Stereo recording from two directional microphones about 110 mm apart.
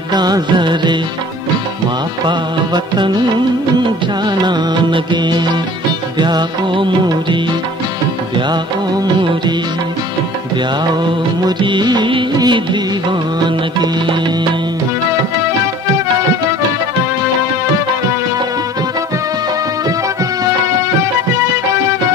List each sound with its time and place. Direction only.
0.1 s music: 40° right (ahead or behind)
2.2 s music of bollywood: 45° right (ahead or behind)
4.3 s music of bollywood: 40° right (ahead or behind)
8.4 s music of bollywood: 45° right (ahead or behind)
11.4 s music of bollywood: 45° right (ahead or behind)